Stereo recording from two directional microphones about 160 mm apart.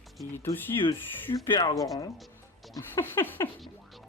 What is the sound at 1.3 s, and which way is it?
Speech, 30° left (ahead or behind).